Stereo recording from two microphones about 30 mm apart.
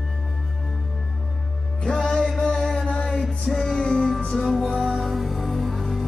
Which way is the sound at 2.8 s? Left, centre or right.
Left.